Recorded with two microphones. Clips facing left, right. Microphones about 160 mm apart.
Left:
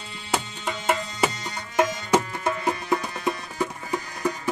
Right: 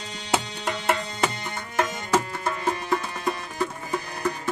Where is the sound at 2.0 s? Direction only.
15° left (ahead or behind).